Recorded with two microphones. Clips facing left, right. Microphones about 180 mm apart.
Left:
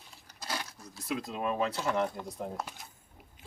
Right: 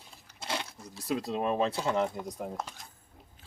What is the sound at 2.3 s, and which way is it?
Speech, 5° left (ahead or behind).